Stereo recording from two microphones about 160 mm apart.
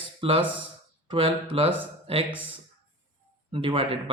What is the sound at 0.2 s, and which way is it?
Speech, 35° right (ahead or behind).